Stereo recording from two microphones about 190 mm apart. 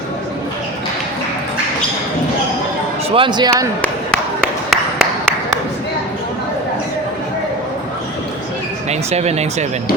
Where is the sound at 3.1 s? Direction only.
25° right (ahead or behind).